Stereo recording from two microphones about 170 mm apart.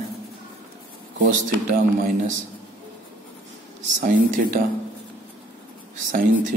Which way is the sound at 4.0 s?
60° right (ahead or behind).